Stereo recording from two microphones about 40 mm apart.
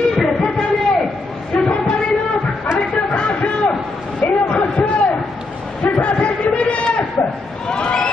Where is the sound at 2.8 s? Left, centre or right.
Left.